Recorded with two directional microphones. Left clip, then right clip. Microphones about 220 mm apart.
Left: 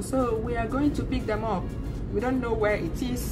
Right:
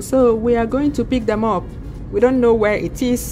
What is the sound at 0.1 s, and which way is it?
A woman's voice, 45° right (ahead or behind).